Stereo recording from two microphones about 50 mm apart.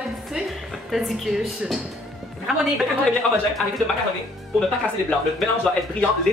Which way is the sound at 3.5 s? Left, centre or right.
Centre.